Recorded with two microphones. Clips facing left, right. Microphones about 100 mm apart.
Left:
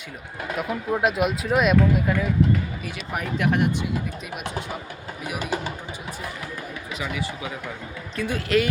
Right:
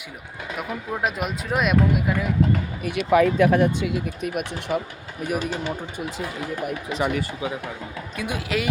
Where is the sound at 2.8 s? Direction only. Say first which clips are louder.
Right 12 dB; 60° right (ahead or behind).